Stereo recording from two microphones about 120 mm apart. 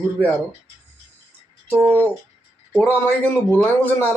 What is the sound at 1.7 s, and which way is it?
Speech, 15° right (ahead or behind).